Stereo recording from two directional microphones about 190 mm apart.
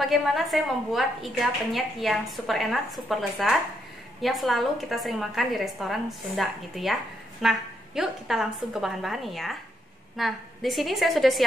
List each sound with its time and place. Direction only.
0.0 s a woman's voice: centre (ahead or behind)